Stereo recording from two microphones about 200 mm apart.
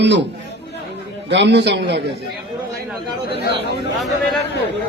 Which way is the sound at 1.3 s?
60° right (ahead or behind).